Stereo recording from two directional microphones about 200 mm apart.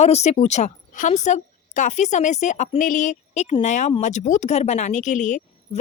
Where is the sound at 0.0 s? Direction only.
35° left (ahead or behind).